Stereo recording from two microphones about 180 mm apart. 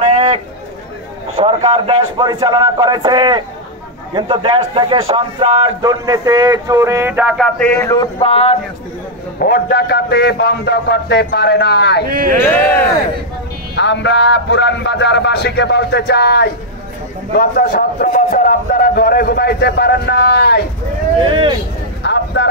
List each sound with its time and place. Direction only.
0.0 s a sound: 35° right (ahead or behind)
1.3 s speech: 30° right (ahead or behind); by 7.7 s 5° left (ahead or behind)
7.7 s a man's voice: 15° left (ahead or behind)
8.2 s a sound: 35° left (ahead or behind)
9.4 s a man's voice: 60° left (ahead or behind)
12.1 s speech: 55° right (ahead or behind)
12.4 s a man's voice: 10° left (ahead or behind)
13.7 s a man's voice: 80° left
17.4 s a man's voice: 55° left (ahead or behind)
21.2 s speech: 30° right (ahead or behind)
22.0 s a sound: 75° left (ahead or behind)